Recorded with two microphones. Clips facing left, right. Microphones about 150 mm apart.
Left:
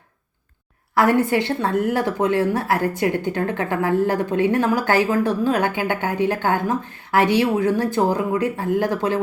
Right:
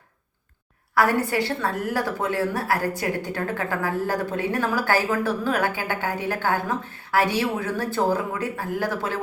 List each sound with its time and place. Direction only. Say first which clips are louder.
0.9 s a woman's voice: left 4 dB; 25° left (ahead or behind)